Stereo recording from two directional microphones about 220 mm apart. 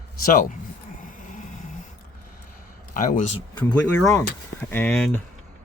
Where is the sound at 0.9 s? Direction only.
40° left (ahead or behind).